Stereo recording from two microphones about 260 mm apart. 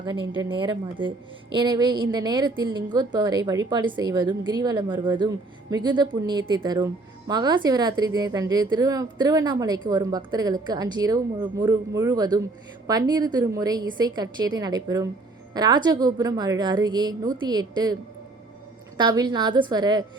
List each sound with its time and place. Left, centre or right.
0.0 s speech: centre
18.9 s speech: centre